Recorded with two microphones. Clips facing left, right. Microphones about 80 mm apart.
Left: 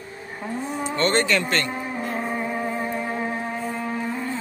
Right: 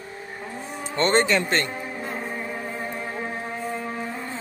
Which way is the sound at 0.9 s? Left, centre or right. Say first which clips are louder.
Right 1 dB; right.